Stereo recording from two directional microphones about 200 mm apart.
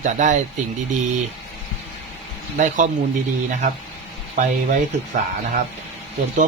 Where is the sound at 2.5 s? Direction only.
40° right (ahead or behind).